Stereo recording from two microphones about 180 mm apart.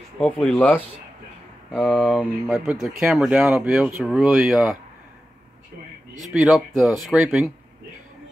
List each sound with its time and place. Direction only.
0.2 s speech: 10° left (ahead or behind)
1.7 s speech: centre (ahead or behind)
6.3 s speech: 5° right (ahead or behind)